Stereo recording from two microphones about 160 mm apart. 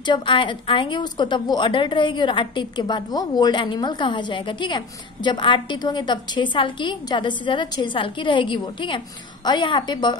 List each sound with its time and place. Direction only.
0.0 s a woman's voice: 30° left (ahead or behind)